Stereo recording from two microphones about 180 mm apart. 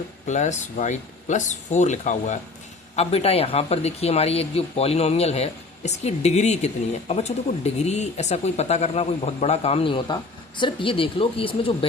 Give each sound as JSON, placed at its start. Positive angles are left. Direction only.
{"t": 0.3, "sound": "speech", "side_deg": 40}